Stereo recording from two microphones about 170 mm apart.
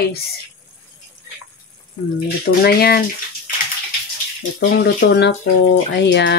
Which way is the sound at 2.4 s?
65° left (ahead or behind).